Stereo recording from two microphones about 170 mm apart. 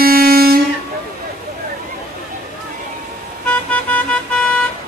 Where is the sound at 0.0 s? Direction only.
60° right (ahead or behind).